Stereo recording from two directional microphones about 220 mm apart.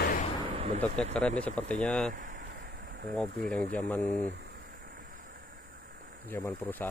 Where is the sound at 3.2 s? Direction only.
45° right (ahead or behind).